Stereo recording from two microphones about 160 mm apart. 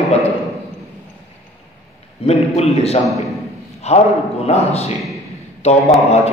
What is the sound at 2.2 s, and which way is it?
A man's voice, 40° left (ahead or behind).